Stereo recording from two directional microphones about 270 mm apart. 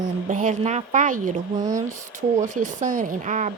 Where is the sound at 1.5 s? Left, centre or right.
Centre.